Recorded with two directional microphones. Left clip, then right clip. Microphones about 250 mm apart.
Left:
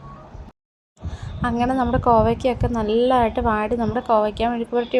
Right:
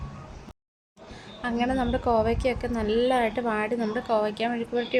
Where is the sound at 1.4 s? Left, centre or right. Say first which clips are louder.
Left 6 dB; centre.